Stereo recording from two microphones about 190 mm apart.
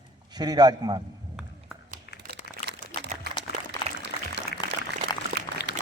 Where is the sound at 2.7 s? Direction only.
65° right (ahead or behind).